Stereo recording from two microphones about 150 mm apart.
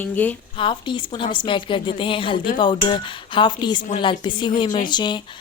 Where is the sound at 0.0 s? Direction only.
10° left (ahead or behind).